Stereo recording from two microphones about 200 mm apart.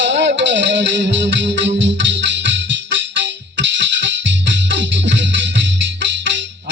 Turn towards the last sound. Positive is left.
turn(degrees=-65)  # may be behind; listen again after turning